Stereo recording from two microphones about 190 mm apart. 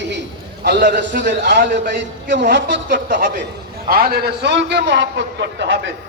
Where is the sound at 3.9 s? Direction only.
50° right (ahead or behind); by 5.8 s 70° right (ahead or behind).